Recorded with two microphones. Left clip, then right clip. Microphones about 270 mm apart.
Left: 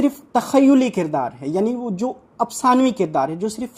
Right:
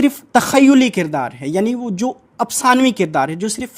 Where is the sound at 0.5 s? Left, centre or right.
Right.